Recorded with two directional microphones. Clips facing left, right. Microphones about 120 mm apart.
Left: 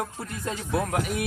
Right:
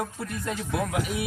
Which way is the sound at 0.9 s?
50° left (ahead or behind).